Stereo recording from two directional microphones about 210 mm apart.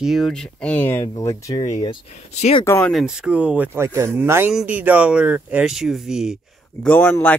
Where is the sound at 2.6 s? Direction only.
10° left (ahead or behind).